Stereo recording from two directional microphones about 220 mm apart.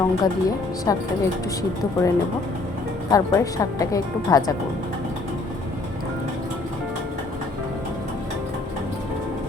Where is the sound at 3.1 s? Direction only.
15° left (ahead or behind).